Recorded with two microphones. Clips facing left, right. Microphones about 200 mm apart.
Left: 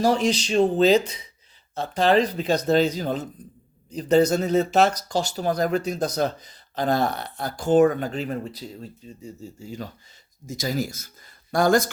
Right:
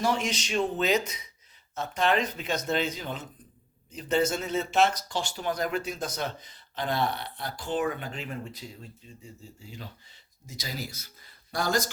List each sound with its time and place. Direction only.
0.0 s speech: 35° left (ahead or behind); by 11.9 s 50° left (ahead or behind)